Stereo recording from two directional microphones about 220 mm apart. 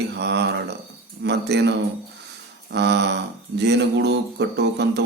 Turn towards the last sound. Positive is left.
turn(degrees=-50)  # may be behind; listen again after turning